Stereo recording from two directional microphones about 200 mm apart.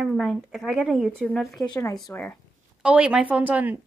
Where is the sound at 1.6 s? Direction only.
15° left (ahead or behind).